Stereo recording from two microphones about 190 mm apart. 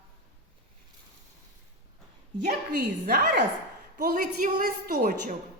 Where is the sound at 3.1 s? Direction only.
55° right (ahead or behind).